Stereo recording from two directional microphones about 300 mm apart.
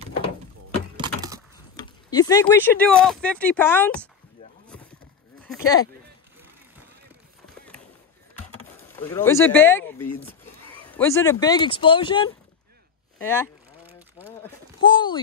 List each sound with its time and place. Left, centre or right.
0.9 s wood: centre
1.8 s speech: centre
5.4 s speech: centre
8.9 s speech: centre
10.9 s speech: centre
14.8 s speech: centre